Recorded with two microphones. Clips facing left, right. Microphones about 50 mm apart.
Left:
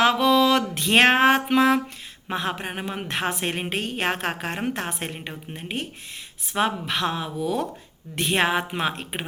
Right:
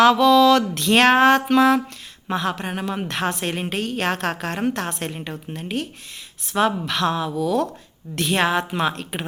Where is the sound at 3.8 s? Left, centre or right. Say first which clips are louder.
Right 3 dB; centre.